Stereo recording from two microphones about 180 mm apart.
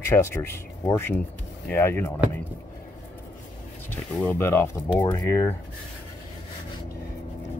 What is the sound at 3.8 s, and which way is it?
Speech, 10° left (ahead or behind).